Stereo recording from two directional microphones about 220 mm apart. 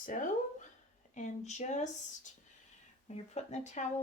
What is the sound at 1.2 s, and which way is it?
Speech, 30° left (ahead or behind).